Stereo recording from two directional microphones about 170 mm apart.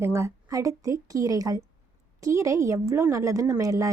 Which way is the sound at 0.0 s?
15° right (ahead or behind).